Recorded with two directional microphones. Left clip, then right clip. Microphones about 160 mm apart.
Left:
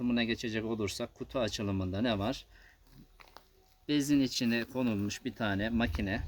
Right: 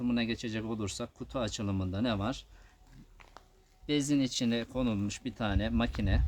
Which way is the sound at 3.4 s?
30° left (ahead or behind).